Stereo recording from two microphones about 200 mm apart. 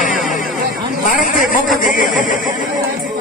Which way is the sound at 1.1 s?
40° left (ahead or behind).